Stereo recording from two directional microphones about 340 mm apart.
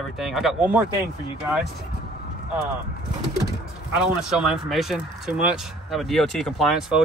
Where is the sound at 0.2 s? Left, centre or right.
Centre.